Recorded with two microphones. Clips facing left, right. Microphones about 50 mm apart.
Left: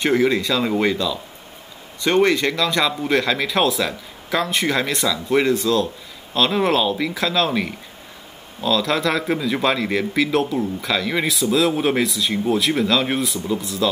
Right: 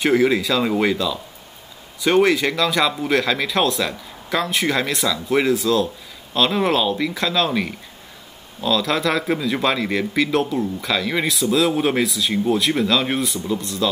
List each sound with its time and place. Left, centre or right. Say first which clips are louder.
0.0 s a man's voice: right 1 dB; centre